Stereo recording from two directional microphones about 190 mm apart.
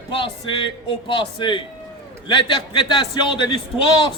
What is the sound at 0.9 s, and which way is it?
A man's voice, 25° left (ahead or behind).